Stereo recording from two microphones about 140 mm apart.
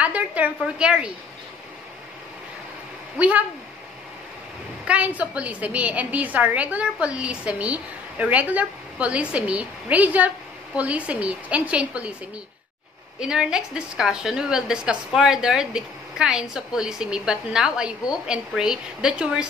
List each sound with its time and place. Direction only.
0.0 s a woman's voice: 10° right (ahead or behind)
3.2 s a woman's voice: 10° right (ahead or behind)
4.8 s a woman's voice: 10° right (ahead or behind)
13.2 s a woman's voice: 5° right (ahead or behind)